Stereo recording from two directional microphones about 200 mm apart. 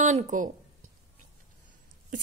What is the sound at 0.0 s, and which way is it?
Speech, 40° right (ahead or behind).